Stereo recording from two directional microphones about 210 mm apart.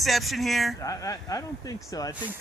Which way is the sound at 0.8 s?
15° left (ahead or behind).